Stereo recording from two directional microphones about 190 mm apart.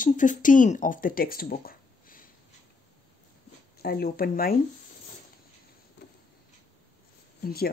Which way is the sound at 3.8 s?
55° left (ahead or behind).